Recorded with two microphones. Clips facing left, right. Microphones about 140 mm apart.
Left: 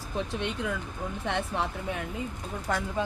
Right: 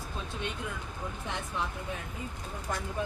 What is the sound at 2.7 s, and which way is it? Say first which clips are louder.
Speech: left 6 dB; 85° left.